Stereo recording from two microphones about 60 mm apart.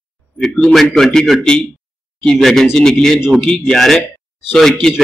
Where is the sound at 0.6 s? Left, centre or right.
Centre.